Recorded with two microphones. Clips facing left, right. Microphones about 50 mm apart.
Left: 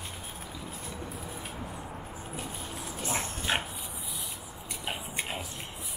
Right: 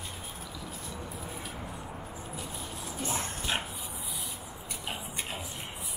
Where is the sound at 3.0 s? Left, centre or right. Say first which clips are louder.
Left 2 dB; left.